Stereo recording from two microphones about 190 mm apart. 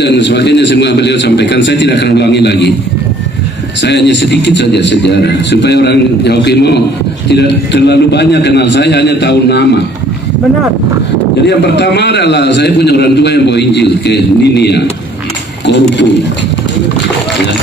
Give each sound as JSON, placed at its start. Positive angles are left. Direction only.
{"t": 0.0, "sound": "a man's voice", "side_deg": 65}
{"t": 3.8, "sound": "a man's voice", "side_deg": 65}
{"t": 11.4, "sound": "a man's voice", "side_deg": 65}